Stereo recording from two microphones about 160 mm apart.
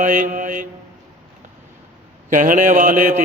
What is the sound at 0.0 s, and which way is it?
Mantra, 55° right (ahead or behind).